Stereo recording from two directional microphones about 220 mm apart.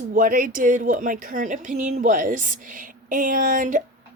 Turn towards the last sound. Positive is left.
turn(degrees=-35)  # may be behind; listen again after turning